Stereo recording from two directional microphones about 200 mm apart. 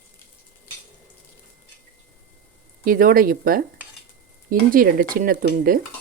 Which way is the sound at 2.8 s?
45° right (ahead or behind).